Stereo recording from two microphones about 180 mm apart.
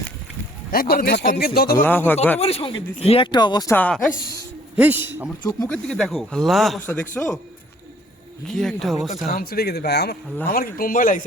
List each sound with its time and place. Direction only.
0.7 s speech: 55° left (ahead or behind)
1.8 s a man's voice: 10° left (ahead or behind)
2.4 s speech: 35° left (ahead or behind)
3.8 s a man's voice: 10° left (ahead or behind)
4.8 s a man's voice: 10° right (ahead or behind)
5.6 s speech: 5° left (ahead or behind)
6.8 s a man's voice: 10° left (ahead or behind)
8.4 s speech: centre (ahead or behind)
9.2 s speech: 55° left (ahead or behind)